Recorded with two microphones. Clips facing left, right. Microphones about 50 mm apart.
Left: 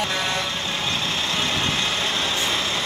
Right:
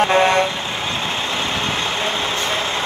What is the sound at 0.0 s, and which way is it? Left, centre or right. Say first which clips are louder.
Vehicle: right 10 dB; right.